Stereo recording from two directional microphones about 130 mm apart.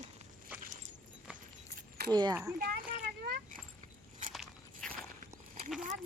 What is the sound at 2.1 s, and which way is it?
Speech, 35° right (ahead or behind).